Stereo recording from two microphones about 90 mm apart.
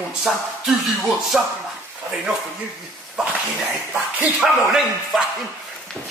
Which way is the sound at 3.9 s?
10° right (ahead or behind).